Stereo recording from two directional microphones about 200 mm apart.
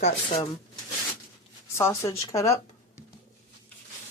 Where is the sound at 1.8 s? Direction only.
15° left (ahead or behind).